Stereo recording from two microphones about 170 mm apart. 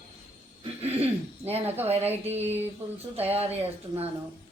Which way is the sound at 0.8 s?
35° right (ahead or behind).